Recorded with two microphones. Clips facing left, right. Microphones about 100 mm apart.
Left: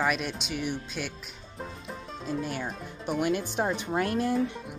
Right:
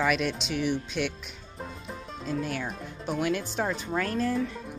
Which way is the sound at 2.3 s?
5° left (ahead or behind).